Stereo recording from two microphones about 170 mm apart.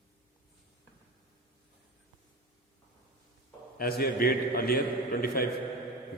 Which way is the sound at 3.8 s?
60° left (ahead or behind).